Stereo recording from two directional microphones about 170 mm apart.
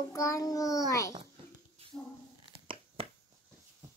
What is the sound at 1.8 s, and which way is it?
Dog, 35° right (ahead or behind).